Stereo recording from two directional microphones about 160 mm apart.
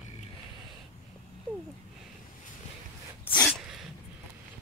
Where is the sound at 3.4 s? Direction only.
Centre (ahead or behind).